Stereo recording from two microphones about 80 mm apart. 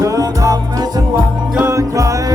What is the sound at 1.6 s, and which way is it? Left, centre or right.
Music, right.